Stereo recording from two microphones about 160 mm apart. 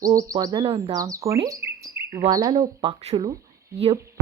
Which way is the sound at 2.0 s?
15° right (ahead or behind).